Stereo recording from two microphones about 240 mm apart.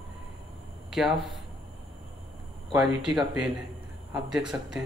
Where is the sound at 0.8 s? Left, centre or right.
Centre.